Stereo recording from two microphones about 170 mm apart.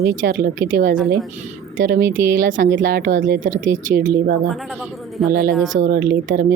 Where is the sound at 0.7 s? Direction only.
50° right (ahead or behind).